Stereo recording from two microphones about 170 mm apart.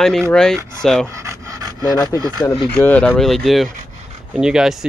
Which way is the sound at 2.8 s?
10° left (ahead or behind).